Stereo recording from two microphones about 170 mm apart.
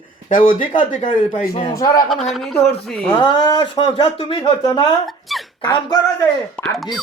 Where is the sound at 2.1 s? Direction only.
Centre (ahead or behind).